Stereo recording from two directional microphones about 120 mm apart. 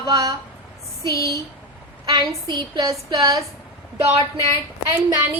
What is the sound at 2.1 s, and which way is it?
A woman's voice, 35° right (ahead or behind).